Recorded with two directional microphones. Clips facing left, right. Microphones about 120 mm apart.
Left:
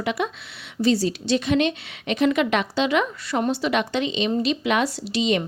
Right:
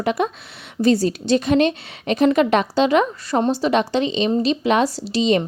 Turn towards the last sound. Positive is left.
turn(degrees=-35)  # may be behind; listen again after turning